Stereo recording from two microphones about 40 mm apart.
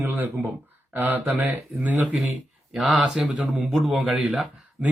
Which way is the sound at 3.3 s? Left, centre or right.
Right.